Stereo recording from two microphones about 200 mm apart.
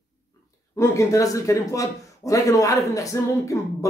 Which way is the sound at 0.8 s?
15° left (ahead or behind).